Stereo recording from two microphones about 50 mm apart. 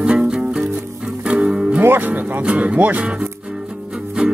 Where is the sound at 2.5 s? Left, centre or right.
Right.